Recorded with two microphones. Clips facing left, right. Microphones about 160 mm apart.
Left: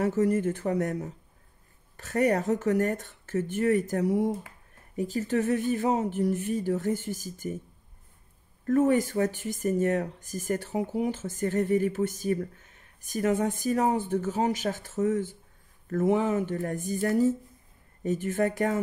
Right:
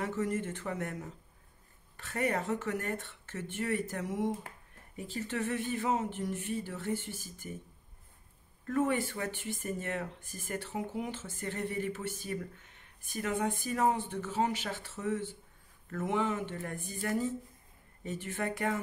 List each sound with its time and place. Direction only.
0.0 s speech: 40° left (ahead or behind)
8.6 s speech: 40° left (ahead or behind)